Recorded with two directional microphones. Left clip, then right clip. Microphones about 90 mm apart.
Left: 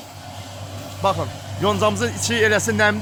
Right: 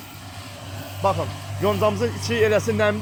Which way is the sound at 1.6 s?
45° left (ahead or behind).